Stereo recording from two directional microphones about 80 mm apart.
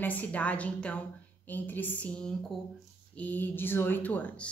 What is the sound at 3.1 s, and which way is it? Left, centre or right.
Speech, left.